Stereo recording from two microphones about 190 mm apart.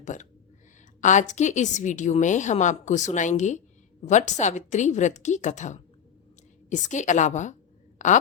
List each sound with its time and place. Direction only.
0.0 s a woman's voice: 40° left (ahead or behind)